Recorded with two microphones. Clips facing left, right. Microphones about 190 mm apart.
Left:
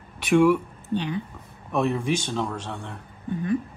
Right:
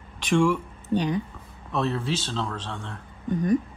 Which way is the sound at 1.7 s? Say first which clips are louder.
Left 3 dB; 10° left (ahead or behind).